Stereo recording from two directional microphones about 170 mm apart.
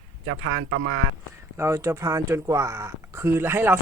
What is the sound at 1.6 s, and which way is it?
Speech, 15° right (ahead or behind).